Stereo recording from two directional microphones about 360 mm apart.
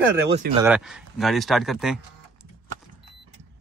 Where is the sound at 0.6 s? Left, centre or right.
Centre.